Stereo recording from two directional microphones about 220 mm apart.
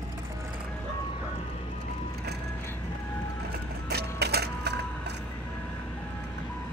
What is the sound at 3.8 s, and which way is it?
Printer, 45° right (ahead or behind).